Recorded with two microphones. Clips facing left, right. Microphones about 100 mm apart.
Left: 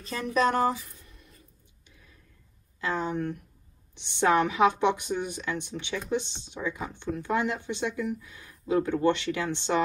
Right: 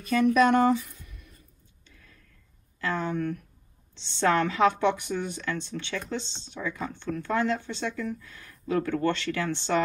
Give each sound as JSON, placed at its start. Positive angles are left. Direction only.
{"t": 0.0, "sound": "speech", "side_deg": 30}
{"t": 1.9, "sound": "a sound", "side_deg": 15}
{"t": 2.8, "sound": "speech", "side_deg": 20}